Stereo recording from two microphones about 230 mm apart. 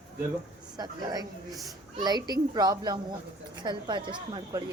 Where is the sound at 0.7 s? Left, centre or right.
Centre.